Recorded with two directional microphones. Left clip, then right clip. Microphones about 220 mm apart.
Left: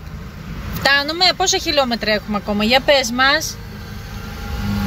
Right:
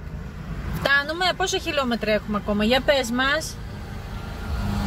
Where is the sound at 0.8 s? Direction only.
5° left (ahead or behind).